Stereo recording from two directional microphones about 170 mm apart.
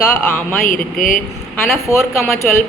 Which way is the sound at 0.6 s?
55° left (ahead or behind).